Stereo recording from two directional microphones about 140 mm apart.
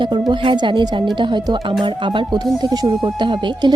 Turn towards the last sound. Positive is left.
turn(degrees=-35)  # may be behind; listen again after turning